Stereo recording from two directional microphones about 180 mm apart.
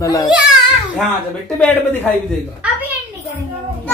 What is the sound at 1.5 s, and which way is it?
Speech, 5° left (ahead or behind).